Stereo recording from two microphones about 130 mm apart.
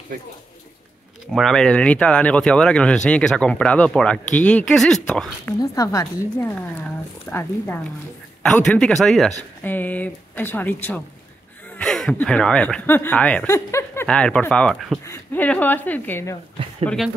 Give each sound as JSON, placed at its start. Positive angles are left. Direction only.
{"t": 1.3, "sound": "speech", "side_deg": 5}
{"t": 5.6, "sound": "speech", "side_deg": 25}
{"t": 7.2, "sound": "speech", "side_deg": 15}
{"t": 9.6, "sound": "speech", "side_deg": 15}
{"t": 13.7, "sound": "a sound", "side_deg": 20}
{"t": 14.0, "sound": "speech", "side_deg": 5}
{"t": 15.0, "sound": "speech", "side_deg": 10}
{"t": 16.8, "sound": "speech", "side_deg": 0}